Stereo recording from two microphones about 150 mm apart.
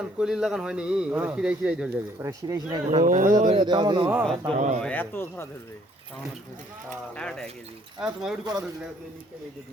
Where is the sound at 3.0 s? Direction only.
60° right (ahead or behind).